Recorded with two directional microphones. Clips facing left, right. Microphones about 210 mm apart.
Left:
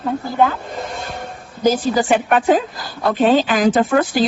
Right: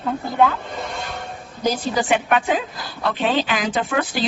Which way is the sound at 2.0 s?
45° left (ahead or behind).